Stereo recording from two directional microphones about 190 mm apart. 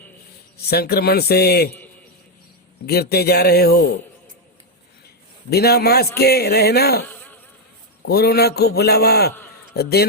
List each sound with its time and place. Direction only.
0.5 s a man's voice: 55° left (ahead or behind)
2.8 s a man's voice: 55° left (ahead or behind)
5.5 s a man's voice: 55° left (ahead or behind)
7.1 s insect: 10° left (ahead or behind)
8.0 s a man's voice: 55° left (ahead or behind)